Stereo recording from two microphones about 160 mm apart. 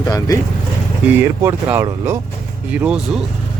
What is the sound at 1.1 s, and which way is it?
Speech, 15° right (ahead or behind).